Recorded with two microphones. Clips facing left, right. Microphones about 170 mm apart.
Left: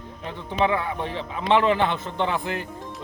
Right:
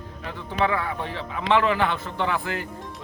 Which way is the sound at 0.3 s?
20° left (ahead or behind).